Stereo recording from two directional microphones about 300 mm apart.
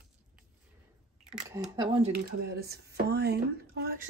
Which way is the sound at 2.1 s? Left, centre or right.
Right.